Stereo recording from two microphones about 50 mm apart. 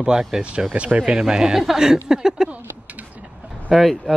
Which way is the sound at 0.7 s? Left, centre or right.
Right.